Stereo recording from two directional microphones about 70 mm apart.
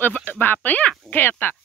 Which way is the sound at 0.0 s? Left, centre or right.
Left.